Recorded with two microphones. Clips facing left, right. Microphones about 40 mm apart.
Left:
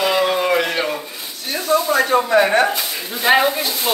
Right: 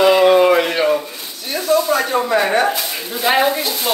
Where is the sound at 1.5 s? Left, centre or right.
Centre.